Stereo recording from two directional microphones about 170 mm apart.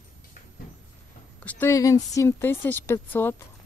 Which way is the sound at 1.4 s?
10° left (ahead or behind).